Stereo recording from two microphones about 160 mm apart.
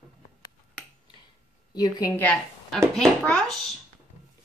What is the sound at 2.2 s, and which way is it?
A woman's voice, 10° left (ahead or behind).